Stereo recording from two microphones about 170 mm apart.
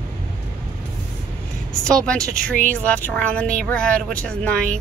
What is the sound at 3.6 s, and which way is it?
Speech, 5° left (ahead or behind).